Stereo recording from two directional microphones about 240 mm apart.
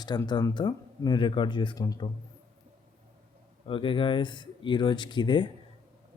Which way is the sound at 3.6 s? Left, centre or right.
Left.